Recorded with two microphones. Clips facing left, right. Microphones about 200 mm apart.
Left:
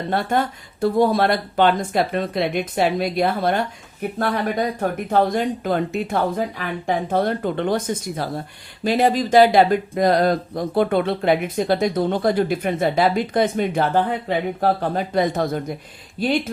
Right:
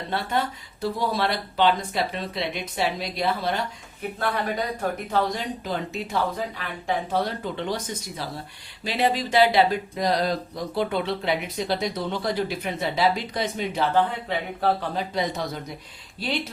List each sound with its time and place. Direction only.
0.1 s speech: 50° left (ahead or behind)
4.8 s speech: 50° left (ahead or behind)